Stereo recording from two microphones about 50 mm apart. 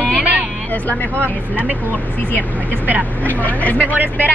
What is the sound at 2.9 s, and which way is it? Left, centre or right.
Speech, right.